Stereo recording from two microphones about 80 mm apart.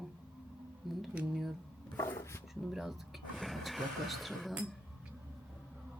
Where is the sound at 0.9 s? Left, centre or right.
Centre.